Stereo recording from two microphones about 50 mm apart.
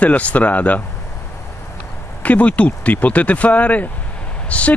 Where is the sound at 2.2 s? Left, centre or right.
Left.